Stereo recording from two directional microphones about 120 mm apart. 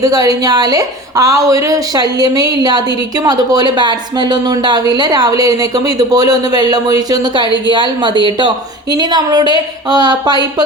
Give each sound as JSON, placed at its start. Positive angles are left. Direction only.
{"t": 0.0, "sound": "speech", "side_deg": -30}